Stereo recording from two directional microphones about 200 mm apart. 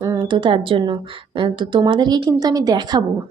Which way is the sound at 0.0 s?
20° right (ahead or behind).